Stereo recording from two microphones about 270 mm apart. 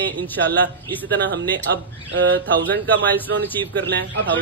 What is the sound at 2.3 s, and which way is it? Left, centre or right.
A man's voice, centre.